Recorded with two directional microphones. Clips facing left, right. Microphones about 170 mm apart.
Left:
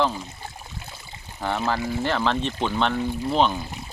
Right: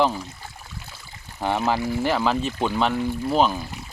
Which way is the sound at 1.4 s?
15° right (ahead or behind).